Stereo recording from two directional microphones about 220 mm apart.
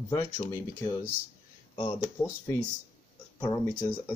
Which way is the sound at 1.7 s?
25° left (ahead or behind).